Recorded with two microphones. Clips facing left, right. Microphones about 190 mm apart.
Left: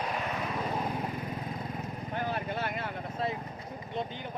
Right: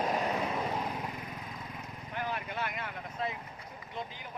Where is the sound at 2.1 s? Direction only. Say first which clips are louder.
Left 3 dB; 35° left (ahead or behind).